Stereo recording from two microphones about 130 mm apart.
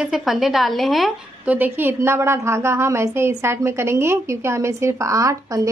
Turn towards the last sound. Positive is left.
turn(degrees=-25)  # may be behind; listen again after turning